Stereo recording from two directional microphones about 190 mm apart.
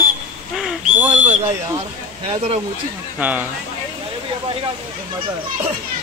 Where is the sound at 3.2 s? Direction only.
10° right (ahead or behind).